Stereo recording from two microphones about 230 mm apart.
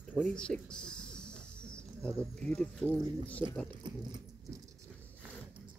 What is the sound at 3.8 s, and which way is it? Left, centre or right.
Dog, centre.